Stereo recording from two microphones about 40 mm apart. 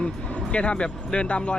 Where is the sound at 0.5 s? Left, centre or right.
Left.